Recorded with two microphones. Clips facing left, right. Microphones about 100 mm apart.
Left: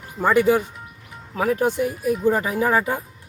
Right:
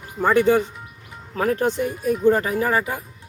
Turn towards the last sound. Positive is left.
turn(degrees=25)  # may be behind; listen again after turning